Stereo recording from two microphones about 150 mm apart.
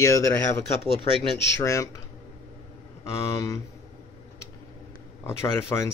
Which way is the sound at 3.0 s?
20° left (ahead or behind).